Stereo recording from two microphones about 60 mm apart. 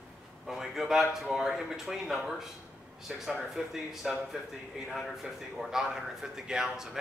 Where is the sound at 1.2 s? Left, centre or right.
Centre.